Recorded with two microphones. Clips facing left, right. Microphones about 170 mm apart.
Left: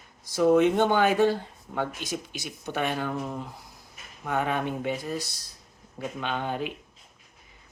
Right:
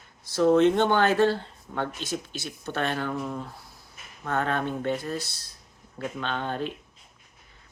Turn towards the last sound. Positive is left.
turn(degrees=10)  # may be behind; listen again after turning